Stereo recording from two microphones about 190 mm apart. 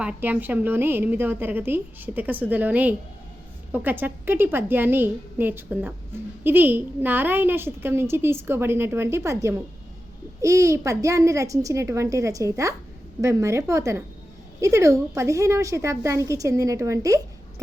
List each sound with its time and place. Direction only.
0.0 s a woman's voice: 10° right (ahead or behind)